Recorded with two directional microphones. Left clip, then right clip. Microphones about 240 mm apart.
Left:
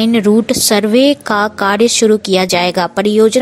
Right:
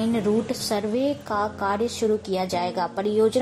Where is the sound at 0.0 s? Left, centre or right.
Left.